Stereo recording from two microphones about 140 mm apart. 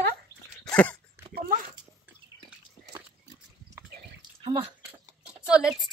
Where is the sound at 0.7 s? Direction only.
10° left (ahead or behind).